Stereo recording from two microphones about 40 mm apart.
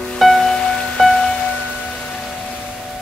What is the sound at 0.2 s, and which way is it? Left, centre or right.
Music, centre.